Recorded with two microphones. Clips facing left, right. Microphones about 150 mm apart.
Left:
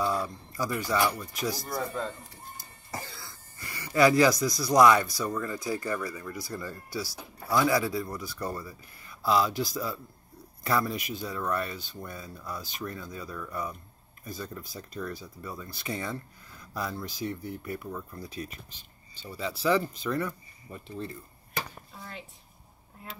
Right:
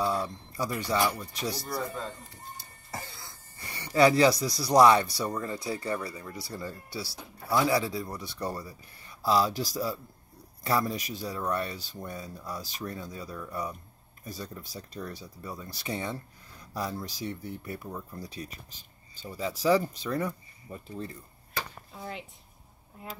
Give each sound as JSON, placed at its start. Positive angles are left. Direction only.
{"t": 0.0, "sound": "speech", "side_deg": -30}
{"t": 3.1, "sound": "speech", "side_deg": -20}